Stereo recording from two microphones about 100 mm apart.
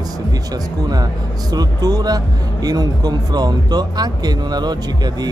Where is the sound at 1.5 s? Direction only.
40° right (ahead or behind).